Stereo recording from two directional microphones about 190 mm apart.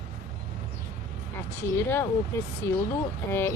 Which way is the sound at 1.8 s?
10° left (ahead or behind).